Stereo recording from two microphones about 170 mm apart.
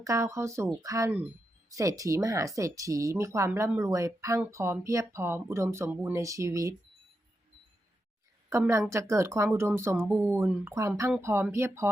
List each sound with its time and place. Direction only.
0.0 s speech: 20° right (ahead or behind)
8.4 s speech: 15° right (ahead or behind)